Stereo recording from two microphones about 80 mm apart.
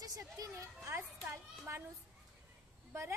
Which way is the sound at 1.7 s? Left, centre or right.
Right.